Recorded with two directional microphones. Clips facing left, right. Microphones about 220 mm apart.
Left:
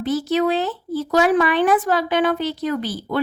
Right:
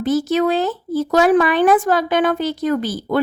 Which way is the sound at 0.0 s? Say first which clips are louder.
Right 3 dB; 45° right (ahead or behind).